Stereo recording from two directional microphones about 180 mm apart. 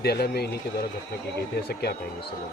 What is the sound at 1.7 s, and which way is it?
Speech, 65° left (ahead or behind).